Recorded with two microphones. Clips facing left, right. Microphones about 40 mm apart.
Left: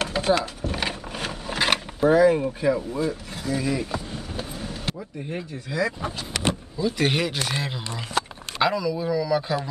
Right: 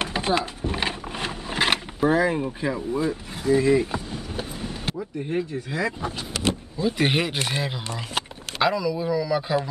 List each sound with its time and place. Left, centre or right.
0.0 s a sound: right
1.1 s vehicle: centre
2.6 s speech: centre
4.1 s vehicle: centre
6.8 s speech: centre
8.6 s speech: centre